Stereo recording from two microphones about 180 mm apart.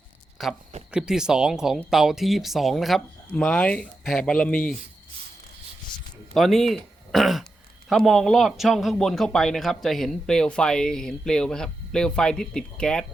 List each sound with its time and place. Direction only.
0.4 s a man's voice: centre (ahead or behind)
6.3 s a man's voice: centre (ahead or behind)